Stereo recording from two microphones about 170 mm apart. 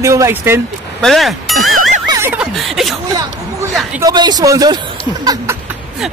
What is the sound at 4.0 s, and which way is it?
Speech, 25° right (ahead or behind).